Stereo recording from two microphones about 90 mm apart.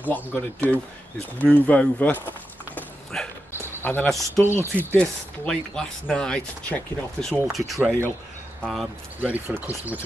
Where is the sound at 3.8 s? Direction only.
20° left (ahead or behind).